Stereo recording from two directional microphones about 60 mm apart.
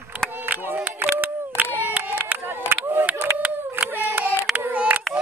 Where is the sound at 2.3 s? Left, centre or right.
Right.